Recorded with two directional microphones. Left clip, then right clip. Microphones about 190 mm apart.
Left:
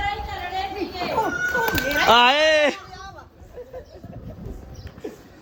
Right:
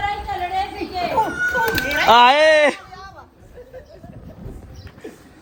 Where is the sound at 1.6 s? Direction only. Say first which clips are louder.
Right 2 dB; 10° left (ahead or behind).